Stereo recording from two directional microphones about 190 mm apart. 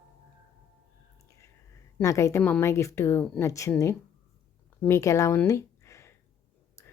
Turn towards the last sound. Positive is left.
turn(degrees=15)  # may be behind; listen again after turning